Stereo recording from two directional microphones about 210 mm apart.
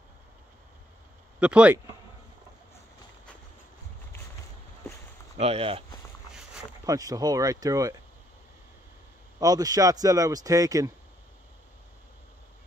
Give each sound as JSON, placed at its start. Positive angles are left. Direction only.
{"t": 1.4, "sound": "speech", "side_deg": -5}
{"t": 5.4, "sound": "speech", "side_deg": -30}
{"t": 6.9, "sound": "speech", "side_deg": -15}
{"t": 9.4, "sound": "speech", "side_deg": -15}